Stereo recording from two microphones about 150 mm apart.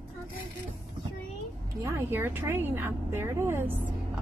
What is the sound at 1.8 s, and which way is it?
A woman's voice, 15° right (ahead or behind).